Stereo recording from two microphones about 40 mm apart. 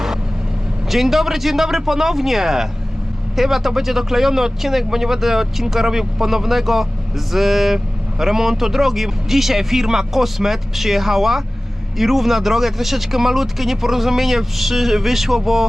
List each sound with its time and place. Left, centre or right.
0.9 s speech: centre